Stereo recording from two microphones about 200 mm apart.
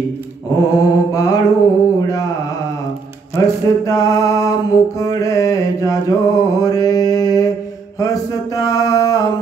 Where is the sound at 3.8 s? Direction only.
15° left (ahead or behind).